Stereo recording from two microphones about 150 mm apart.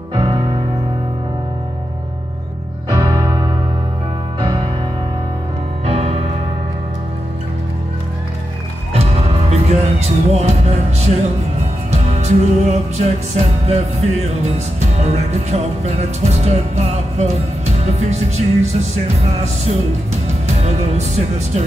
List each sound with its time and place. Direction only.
0.1 s music: 35° right (ahead or behind)
2.9 s music: 25° right (ahead or behind)
5.9 s music: 40° right (ahead or behind)
9.5 s music: 45° right (ahead or behind)
15.0 s music: 45° right (ahead or behind)
20.9 s music: 45° right (ahead or behind)